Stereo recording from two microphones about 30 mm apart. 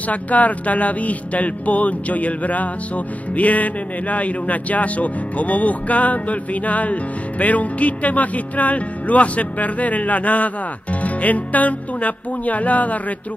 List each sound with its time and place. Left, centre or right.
0.1 s speech: left